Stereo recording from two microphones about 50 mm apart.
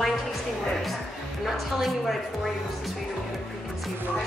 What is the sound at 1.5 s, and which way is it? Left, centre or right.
Speech, centre.